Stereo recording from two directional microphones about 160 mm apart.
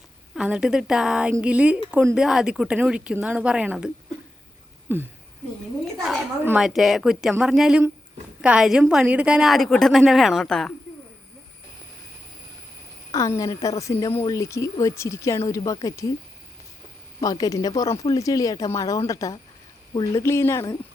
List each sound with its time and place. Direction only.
0.3 s a woman's voice: 5° right (ahead or behind)
6.0 s a woman's voice: centre (ahead or behind)
13.1 s a woman's voice: 20° left (ahead or behind)
17.2 s a woman's voice: 25° left (ahead or behind)
20.2 s speech: 15° left (ahead or behind)